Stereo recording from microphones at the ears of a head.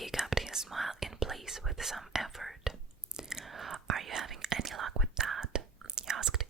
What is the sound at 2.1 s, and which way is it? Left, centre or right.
Whispering, centre.